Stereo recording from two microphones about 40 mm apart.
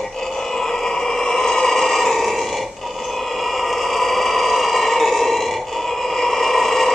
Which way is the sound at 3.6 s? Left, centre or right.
Centre.